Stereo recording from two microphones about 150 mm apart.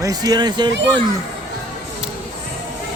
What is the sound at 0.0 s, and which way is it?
Speech, 25° right (ahead or behind).